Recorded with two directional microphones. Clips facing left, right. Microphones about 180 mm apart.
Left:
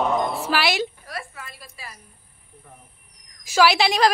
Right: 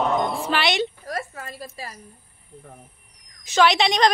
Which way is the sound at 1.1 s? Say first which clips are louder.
Right 5 dB; 40° right (ahead or behind).